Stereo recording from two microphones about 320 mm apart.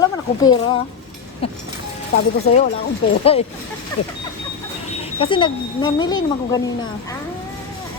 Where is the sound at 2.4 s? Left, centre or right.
Left.